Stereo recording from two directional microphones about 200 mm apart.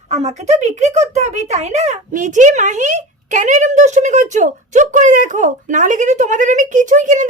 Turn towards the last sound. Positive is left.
turn(degrees=-40)  # may be behind; listen again after turning